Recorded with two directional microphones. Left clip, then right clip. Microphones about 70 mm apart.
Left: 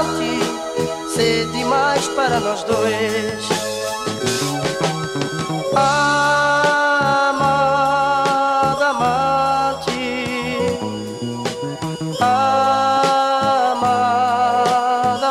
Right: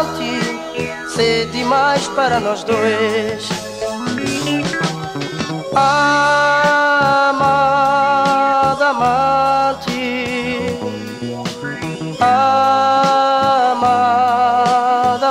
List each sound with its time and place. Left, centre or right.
0.7 s music: right
1.6 s music: right
2.0 s music: right
5.8 s music: right
12.3 s music: right
13.7 s music: right
14.6 s music: right